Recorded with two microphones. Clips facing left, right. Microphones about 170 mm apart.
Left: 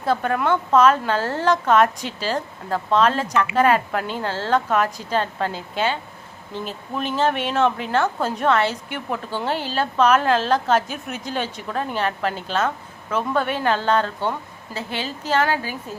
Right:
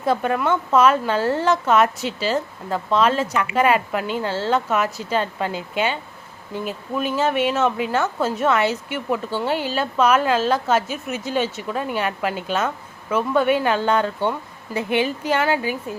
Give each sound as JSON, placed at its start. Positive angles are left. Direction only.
{"t": 0.0, "sound": "a woman's voice", "side_deg": -10}
{"t": 2.0, "sound": "speech", "side_deg": 45}
{"t": 2.3, "sound": "a woman's voice", "side_deg": -10}
{"t": 4.1, "sound": "speech", "side_deg": 45}
{"t": 4.4, "sound": "a woman's voice", "side_deg": -5}